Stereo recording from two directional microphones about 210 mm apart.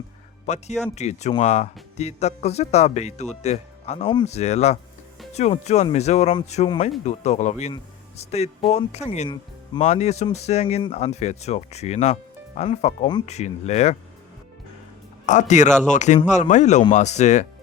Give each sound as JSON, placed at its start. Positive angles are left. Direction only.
{"t": 0.4, "sound": "speech", "side_deg": 30}
{"t": 15.3, "sound": "speech", "side_deg": 35}